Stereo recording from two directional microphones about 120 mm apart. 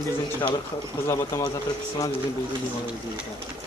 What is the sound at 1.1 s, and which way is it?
Speech, 25° left (ahead or behind).